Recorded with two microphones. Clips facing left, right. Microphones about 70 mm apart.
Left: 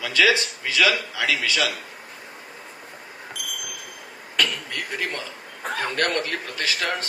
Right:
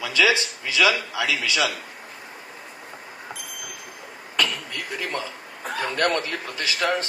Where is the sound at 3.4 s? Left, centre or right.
Left.